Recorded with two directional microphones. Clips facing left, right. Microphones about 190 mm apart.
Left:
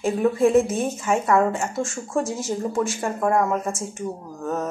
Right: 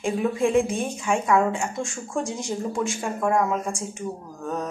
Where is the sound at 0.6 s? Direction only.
5° left (ahead or behind).